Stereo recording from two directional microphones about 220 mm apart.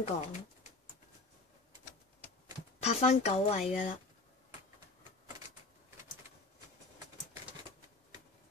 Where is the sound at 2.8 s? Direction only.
30° left (ahead or behind).